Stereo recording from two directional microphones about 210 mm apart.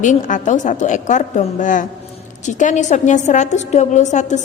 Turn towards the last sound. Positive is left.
turn(degrees=35)  # may be behind; listen again after turning